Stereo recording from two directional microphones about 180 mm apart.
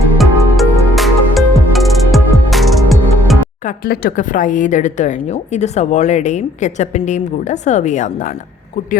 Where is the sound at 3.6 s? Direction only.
55° left (ahead or behind).